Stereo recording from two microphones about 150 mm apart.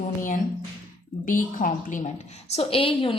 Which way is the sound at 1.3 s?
60° left (ahead or behind).